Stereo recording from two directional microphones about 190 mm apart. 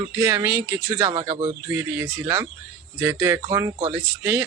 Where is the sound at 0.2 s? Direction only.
15° right (ahead or behind).